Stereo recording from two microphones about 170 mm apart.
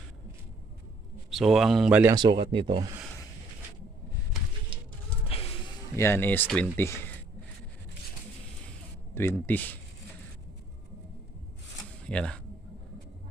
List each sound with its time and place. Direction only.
1.3 s speech: centre (ahead or behind)
2.1 s speech: 25° right (ahead or behind)
5.3 s music: 35° left (ahead or behind)
6.0 s speech: 15° left (ahead or behind)
9.1 s speech: 10° left (ahead or behind)
12.0 s speech: 5° left (ahead or behind)